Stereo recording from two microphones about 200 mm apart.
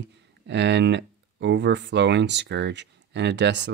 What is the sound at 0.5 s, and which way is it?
Speech, 60° right (ahead or behind).